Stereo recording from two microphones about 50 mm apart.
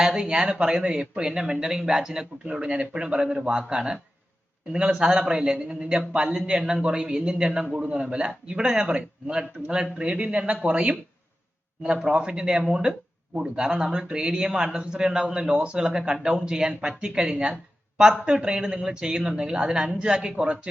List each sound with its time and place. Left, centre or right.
0.0 s a man's voice: centre